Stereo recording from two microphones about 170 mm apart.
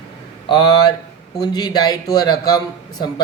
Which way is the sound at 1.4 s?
25° left (ahead or behind).